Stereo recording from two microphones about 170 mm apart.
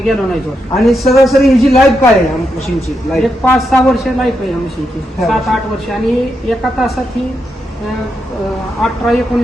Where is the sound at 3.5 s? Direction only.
Centre (ahead or behind).